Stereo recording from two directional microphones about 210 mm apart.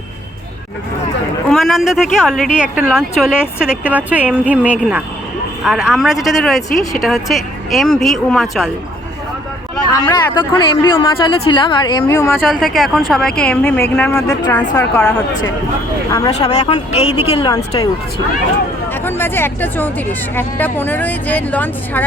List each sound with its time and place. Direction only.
1.5 s speech: centre (ahead or behind)
9.9 s speech: 15° left (ahead or behind)
12.5 s speech: centre (ahead or behind); by 15.0 s 15° left (ahead or behind)
16.5 s speech: 30° left (ahead or behind)
19.0 s speech: 10° left (ahead or behind)